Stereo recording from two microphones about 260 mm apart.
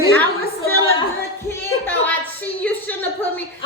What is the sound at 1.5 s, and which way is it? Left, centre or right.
Speech, centre.